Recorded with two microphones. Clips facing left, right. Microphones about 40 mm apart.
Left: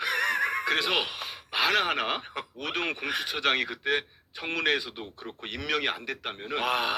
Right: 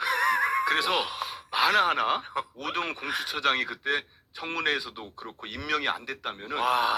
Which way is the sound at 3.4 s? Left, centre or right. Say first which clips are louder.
Right 1 dB; left.